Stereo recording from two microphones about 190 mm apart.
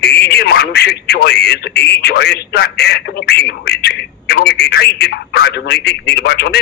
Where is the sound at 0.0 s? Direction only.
60° left (ahead or behind).